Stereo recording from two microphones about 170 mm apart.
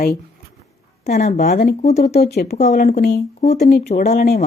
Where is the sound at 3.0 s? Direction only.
70° left (ahead or behind).